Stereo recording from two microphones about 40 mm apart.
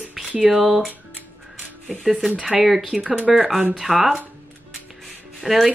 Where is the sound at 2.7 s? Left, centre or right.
Centre.